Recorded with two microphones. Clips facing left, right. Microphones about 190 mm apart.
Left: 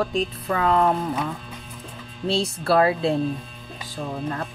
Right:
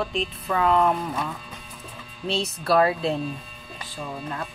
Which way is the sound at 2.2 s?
30° left (ahead or behind).